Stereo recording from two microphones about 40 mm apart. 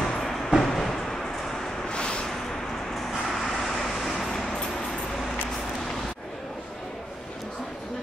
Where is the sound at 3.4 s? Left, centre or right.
Centre.